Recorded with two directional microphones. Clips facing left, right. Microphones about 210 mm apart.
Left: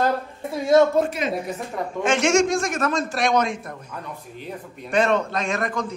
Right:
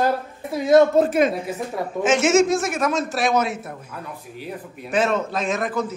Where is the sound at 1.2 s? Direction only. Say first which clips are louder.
Right 8 dB; 50° right (ahead or behind).